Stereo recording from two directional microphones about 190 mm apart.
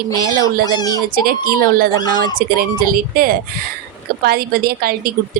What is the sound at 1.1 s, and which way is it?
A woman's voice, 50° right (ahead or behind).